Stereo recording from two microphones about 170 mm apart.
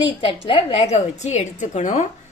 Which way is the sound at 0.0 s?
30° left (ahead or behind).